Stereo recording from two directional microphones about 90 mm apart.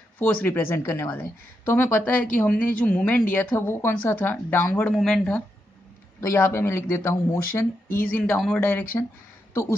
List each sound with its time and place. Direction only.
0.2 s speech: 20° left (ahead or behind)
6.3 s speech: 25° left (ahead or behind)